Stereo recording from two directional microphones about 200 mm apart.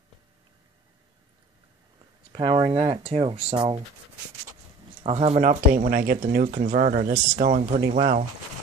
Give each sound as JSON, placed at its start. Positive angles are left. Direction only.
{"t": 2.3, "sound": "speech", "side_deg": -25}
{"t": 5.0, "sound": "speech", "side_deg": -30}